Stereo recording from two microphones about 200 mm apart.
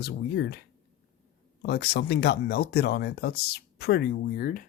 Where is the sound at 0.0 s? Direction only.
55° left (ahead or behind).